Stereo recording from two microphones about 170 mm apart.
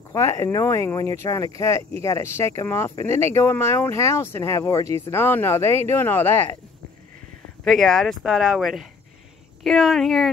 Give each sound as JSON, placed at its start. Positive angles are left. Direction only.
{"t": 0.1, "sound": "speech", "side_deg": 15}
{"t": 7.6, "sound": "speech", "side_deg": 0}